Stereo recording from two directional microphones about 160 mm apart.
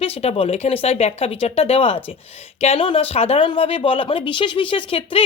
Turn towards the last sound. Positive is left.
turn(degrees=35)  # may be behind; listen again after turning